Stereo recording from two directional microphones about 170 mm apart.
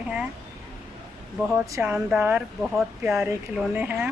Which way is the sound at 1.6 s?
15° right (ahead or behind).